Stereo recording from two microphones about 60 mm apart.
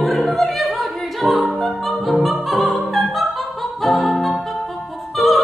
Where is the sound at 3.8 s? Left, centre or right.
Centre.